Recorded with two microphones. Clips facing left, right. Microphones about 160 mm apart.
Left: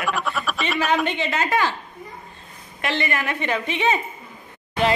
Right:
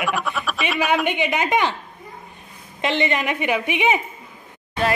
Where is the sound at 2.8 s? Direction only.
20° right (ahead or behind).